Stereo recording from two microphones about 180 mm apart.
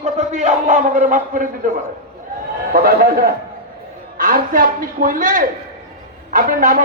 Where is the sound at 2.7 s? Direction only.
55° right (ahead or behind).